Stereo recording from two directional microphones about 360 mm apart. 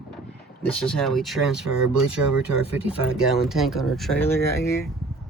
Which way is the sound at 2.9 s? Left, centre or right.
Centre.